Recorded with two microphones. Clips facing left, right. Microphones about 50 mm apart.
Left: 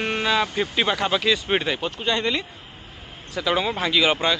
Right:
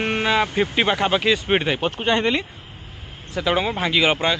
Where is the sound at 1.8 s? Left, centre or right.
Right.